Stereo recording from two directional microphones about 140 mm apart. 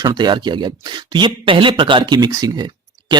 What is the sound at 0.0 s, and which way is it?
A man's voice, 30° right (ahead or behind).